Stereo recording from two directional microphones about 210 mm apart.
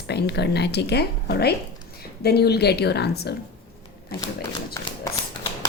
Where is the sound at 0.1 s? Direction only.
50° left (ahead or behind).